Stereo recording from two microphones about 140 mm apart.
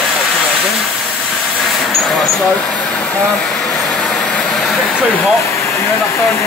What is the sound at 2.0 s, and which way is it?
Vehicle, centre (ahead or behind).